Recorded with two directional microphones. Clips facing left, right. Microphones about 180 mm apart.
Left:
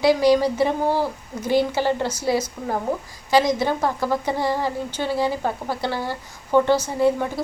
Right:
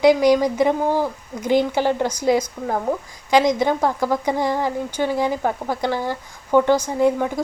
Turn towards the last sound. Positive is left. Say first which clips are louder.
# right 2 dB
turn(degrees=-15)  # may be behind; listen again after turning